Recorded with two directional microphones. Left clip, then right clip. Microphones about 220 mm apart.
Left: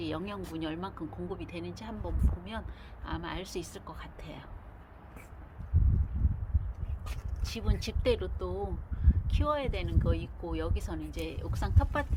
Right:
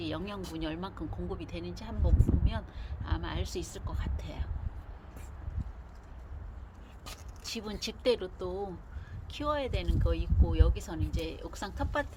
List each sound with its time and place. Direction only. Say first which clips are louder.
0.0 s a woman's voice: left 1 dB; 5° left (ahead or behind)
7.0 s speech: right 2 dB; 5° right (ahead or behind)